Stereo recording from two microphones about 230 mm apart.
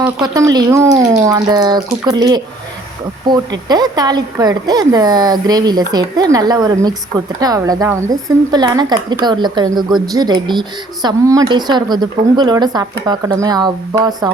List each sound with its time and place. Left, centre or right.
0.0 s speech: centre